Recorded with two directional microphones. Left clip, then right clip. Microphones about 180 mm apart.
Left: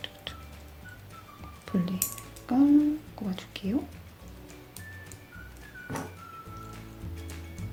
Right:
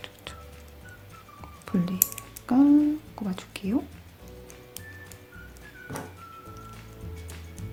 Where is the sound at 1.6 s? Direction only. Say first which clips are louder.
Right 2 dB; 30° right (ahead or behind).